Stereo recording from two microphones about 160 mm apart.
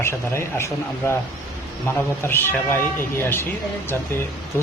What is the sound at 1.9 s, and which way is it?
Speech, 15° left (ahead or behind).